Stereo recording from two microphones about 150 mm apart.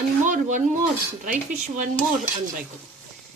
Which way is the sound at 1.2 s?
60° right (ahead or behind).